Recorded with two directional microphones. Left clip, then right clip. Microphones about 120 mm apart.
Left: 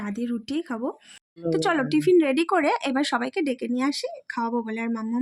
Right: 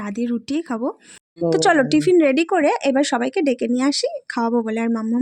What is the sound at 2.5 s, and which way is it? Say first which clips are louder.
Speech: right 5 dB; 20° right (ahead or behind).